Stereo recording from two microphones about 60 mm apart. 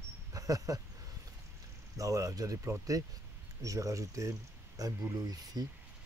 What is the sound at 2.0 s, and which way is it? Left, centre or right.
Speech, right.